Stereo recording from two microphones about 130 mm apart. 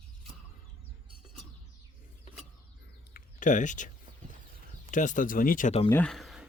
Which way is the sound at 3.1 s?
80° left.